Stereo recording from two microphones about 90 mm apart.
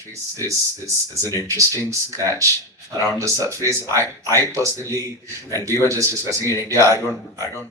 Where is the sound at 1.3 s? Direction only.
35° right (ahead or behind).